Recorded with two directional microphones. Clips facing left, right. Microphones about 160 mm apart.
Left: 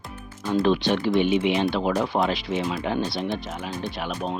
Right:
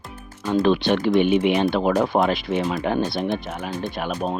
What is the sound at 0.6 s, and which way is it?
Speech, 60° right (ahead or behind).